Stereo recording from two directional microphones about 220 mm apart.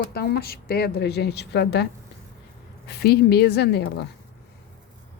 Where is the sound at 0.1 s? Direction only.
45° left (ahead or behind).